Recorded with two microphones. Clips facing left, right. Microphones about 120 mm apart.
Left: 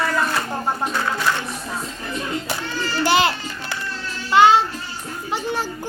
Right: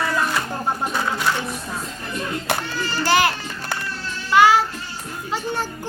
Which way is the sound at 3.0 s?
20° left (ahead or behind).